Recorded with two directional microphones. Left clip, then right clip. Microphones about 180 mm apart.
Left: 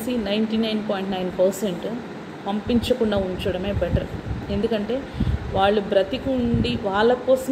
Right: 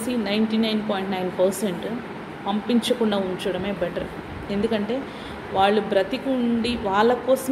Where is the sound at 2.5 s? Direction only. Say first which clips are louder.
Even; 10° right (ahead or behind).